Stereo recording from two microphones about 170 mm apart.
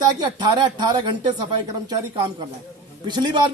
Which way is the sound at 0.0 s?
25° right (ahead or behind).